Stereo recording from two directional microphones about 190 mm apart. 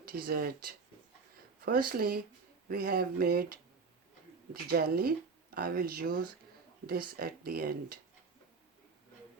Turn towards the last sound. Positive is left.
turn(degrees=-55)  # may be behind; listen again after turning